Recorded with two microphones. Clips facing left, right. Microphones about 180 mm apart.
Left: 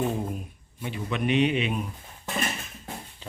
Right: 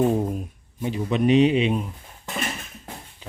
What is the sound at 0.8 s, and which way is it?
Speech, 40° right (ahead or behind).